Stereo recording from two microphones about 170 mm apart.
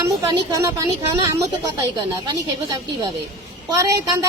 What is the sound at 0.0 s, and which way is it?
Speech, 20° right (ahead or behind).